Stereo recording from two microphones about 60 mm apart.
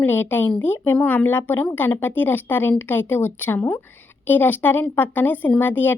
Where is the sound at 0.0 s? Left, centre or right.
Left.